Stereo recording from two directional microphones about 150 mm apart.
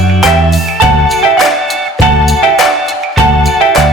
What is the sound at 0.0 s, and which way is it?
Music, centre (ahead or behind).